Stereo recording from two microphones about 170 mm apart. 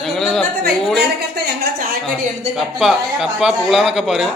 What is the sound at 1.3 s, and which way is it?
Speech, 60° right (ahead or behind).